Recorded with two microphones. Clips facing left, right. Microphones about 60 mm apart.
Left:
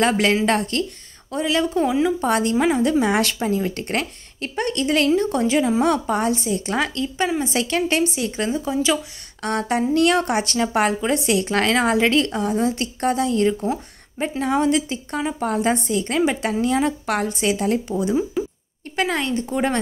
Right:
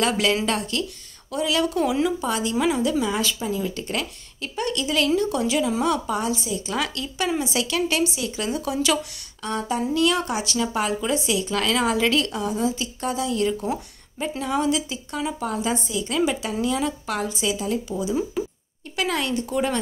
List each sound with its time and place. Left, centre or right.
0.0 s a woman's voice: left
2.1 s speech: left
2.5 s a woman's voice: left
8.5 s a woman's voice: left
9.4 s speech: left
18.4 s speech: centre
18.9 s a woman's voice: left